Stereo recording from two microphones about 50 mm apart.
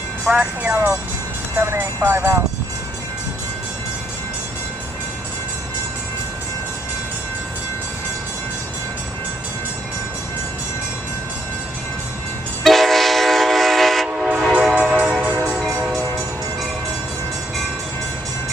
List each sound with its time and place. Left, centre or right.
0.2 s speech: centre
2.0 s speech: right
12.6 s train: centre
14.0 s train: centre
15.6 s train: centre